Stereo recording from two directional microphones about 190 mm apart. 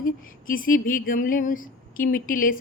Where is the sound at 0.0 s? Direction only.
45° left (ahead or behind).